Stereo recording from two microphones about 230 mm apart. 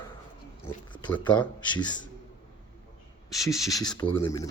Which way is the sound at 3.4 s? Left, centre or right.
Centre.